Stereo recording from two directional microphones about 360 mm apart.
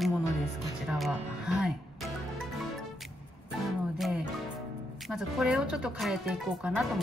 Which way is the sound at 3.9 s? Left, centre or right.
Centre.